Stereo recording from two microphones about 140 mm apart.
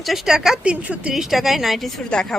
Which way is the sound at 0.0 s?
Centre (ahead or behind).